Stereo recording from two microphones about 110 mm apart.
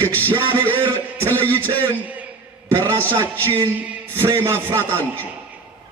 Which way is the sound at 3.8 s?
20° right (ahead or behind).